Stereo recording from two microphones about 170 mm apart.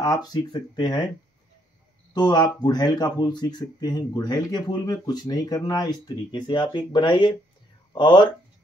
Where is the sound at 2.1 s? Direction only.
25° left (ahead or behind).